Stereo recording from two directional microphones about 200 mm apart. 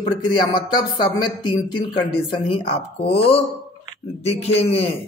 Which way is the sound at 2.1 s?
25° left (ahead or behind).